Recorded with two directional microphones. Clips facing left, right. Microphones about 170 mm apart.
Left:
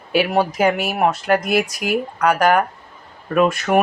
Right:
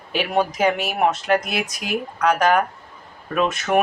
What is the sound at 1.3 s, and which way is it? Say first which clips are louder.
Speech: left 5 dB; 55° left (ahead or behind).